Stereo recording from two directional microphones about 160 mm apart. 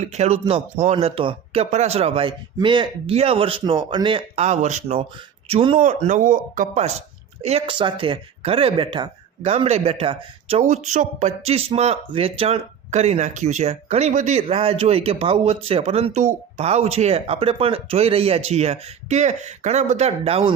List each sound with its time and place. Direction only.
0.0 s speech: 45° right (ahead or behind)
4.4 s speech: 45° right (ahead or behind)
7.4 s speech: 35° right (ahead or behind)
10.6 s speech: 45° right (ahead or behind)